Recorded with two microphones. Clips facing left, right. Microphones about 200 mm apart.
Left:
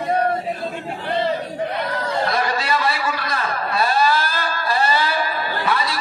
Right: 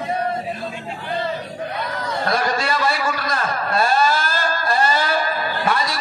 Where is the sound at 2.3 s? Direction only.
50° right (ahead or behind).